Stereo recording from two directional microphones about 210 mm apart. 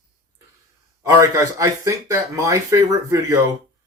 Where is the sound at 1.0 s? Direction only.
15° right (ahead or behind).